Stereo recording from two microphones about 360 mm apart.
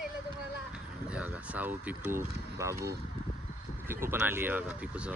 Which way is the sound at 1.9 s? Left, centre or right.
Centre.